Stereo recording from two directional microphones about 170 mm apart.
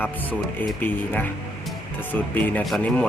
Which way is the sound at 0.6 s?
10° left (ahead or behind).